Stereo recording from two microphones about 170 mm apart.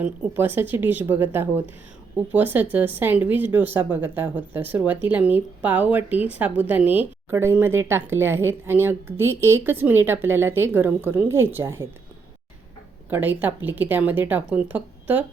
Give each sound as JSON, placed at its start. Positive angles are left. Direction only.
{"t": 0.0, "sound": "speech", "side_deg": -10}
{"t": 13.1, "sound": "speech", "side_deg": -10}